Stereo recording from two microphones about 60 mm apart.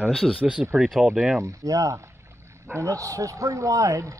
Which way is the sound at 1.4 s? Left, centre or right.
Right.